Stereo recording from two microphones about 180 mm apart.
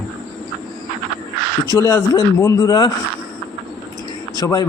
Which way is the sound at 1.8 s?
20° left (ahead or behind).